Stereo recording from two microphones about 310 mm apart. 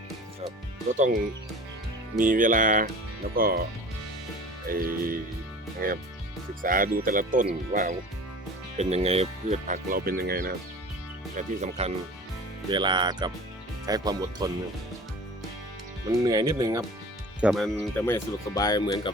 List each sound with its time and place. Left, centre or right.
2.1 s speech: right
4.7 s speech: right; by 14.5 s centre
16.0 s speech: centre
17.4 s speech: centre